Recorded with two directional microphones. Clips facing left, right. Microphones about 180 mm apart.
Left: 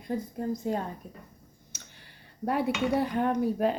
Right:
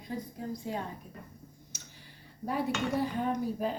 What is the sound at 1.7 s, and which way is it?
Speech, 65° left (ahead or behind).